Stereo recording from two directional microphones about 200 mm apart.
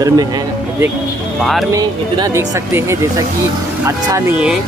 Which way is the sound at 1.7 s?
20° right (ahead or behind).